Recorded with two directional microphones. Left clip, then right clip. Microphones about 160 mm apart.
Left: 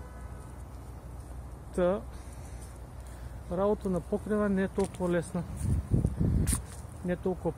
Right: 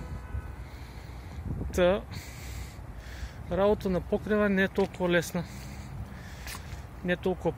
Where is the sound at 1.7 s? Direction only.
15° right (ahead or behind).